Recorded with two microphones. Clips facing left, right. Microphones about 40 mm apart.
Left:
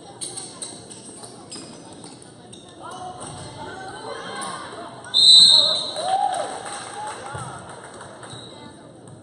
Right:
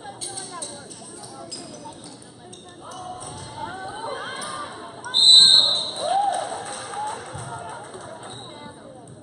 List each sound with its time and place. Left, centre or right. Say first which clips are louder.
2.8 s music: left 2 dB; centre
3.5 s chatter: right 4 dB; centre
4.4 s a sound: left 1 dB; centre
5.1 s basketball bounce: left 1 dB; left
5.8 s basketball bounce: even; centre
6.1 s a sound: even; centre
6.8 s music: right 2 dB; centre